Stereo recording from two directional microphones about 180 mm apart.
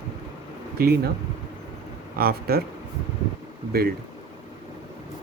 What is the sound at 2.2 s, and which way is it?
Speech, 60° right (ahead or behind).